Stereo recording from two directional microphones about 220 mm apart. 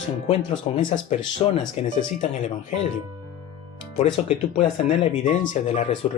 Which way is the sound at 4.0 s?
30° left (ahead or behind).